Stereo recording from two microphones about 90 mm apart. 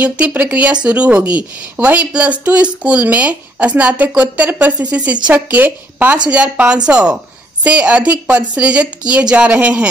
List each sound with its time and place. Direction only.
0.0 s a woman's voice: 20° right (ahead or behind)